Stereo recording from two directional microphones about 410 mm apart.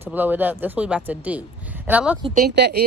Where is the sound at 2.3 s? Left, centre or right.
Right.